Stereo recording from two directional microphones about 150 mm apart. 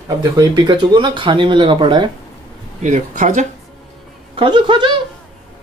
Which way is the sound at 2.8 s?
55° right (ahead or behind).